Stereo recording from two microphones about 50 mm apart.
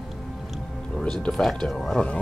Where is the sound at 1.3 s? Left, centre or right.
Centre.